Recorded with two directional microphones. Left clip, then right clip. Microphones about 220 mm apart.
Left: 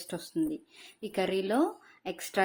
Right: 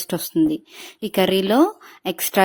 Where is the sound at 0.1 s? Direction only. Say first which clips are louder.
Right 13 dB; 40° right (ahead or behind).